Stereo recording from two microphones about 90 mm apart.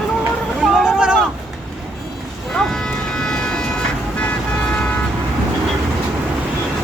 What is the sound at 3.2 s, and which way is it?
Train, 10° left (ahead or behind).